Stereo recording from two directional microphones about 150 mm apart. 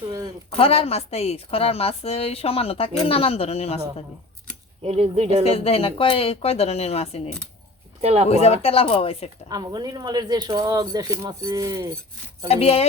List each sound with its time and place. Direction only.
0.5 s a woman's voice: 40° left (ahead or behind)
4.8 s speech: 45° right (ahead or behind)
5.5 s a woman's voice: 40° left (ahead or behind)
8.0 s speech: 45° right (ahead or behind)
8.3 s a woman's voice: 45° left (ahead or behind)
9.5 s speech: 25° right (ahead or behind)
12.5 s speech: 45° left (ahead or behind)